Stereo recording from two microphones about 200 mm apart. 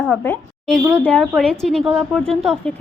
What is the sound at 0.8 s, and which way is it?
Speech, 10° right (ahead or behind).